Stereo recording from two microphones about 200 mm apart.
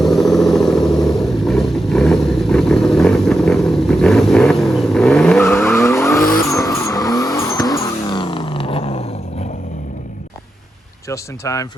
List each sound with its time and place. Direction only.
0.0 s vehicle: centre (ahead or behind); by 9.5 s 30° left (ahead or behind)
11.1 s speech: 15° left (ahead or behind)